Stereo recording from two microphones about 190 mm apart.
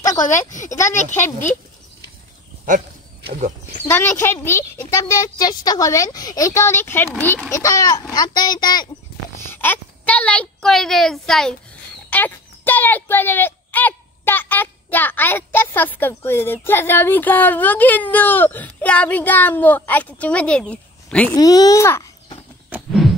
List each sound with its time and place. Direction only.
0.0 s a sound: 15° left (ahead or behind)
0.3 s speech: 40° left (ahead or behind)
0.7 s speech: 15° left (ahead or behind)
3.3 s speech: 40° right (ahead or behind)
3.8 s a child's voice: 15° left (ahead or behind)
9.5 s a woman's voice: 10° left (ahead or behind)
21.4 s a child's voice: 20° left (ahead or behind)
22.7 s a sound: centre (ahead or behind)